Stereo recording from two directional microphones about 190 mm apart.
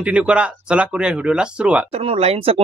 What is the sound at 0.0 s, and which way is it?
Speech, 5° right (ahead or behind).